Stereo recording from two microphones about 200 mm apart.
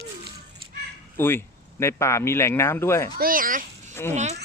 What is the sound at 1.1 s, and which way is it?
Fowl, 10° left (ahead or behind).